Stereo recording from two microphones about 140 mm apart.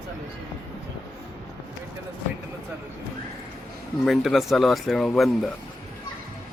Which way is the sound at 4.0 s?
Centre (ahead or behind).